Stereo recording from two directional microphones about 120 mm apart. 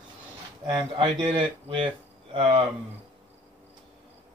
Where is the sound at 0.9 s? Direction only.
45° right (ahead or behind).